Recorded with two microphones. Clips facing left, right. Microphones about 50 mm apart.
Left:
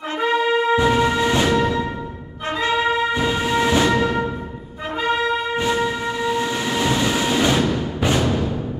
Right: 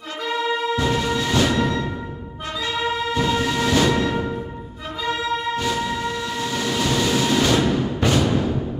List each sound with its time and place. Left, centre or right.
0.2 s music: left
2.6 s music: left
3.2 s music: centre
5.6 s train: left
7.5 s music: centre